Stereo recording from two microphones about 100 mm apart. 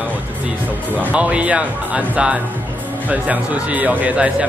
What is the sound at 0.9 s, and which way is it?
Speech, 15° right (ahead or behind).